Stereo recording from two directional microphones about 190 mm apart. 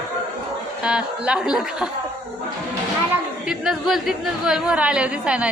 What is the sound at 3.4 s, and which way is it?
A woman's voice, 5° right (ahead or behind).